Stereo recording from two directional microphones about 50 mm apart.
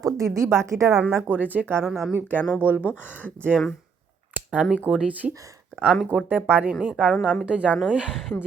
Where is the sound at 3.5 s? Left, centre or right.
Centre.